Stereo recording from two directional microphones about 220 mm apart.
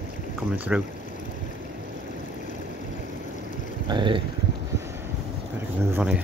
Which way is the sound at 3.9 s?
20° right (ahead or behind).